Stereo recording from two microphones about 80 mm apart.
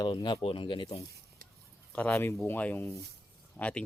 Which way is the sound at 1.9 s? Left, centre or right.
Centre.